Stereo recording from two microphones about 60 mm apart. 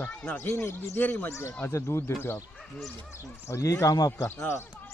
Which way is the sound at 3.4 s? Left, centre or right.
Left.